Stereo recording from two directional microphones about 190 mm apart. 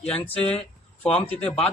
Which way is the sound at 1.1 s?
5° left (ahead or behind).